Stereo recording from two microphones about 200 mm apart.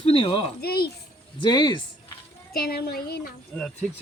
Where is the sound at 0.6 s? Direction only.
50° left (ahead or behind).